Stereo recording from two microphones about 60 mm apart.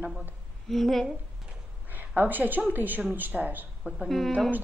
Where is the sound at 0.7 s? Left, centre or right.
Centre.